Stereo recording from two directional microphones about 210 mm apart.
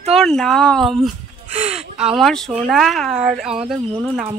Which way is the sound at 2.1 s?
Centre (ahead or behind).